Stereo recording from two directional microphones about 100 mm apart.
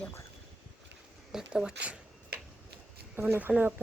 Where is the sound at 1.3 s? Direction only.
5° right (ahead or behind).